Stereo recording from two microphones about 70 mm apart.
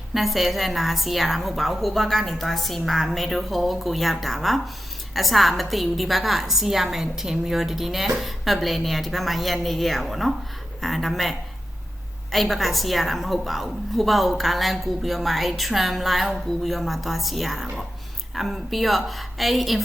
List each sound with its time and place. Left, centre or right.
0.1 s a woman's voice: centre